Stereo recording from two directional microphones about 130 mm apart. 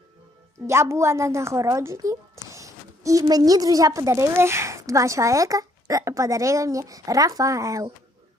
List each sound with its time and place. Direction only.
0.7 s a woman's voice: 20° right (ahead or behind)